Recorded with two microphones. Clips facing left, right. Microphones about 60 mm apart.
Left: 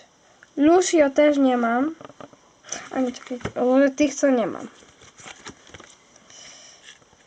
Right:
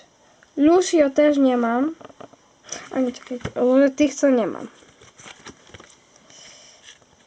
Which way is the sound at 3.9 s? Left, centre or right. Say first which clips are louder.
Right 2 dB; left.